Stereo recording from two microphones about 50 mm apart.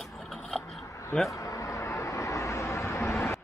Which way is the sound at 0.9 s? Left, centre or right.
Left.